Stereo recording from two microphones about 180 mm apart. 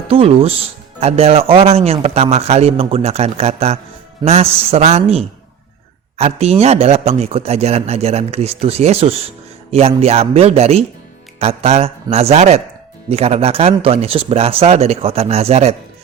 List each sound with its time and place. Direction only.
0.1 s a man's voice: 30° right (ahead or behind)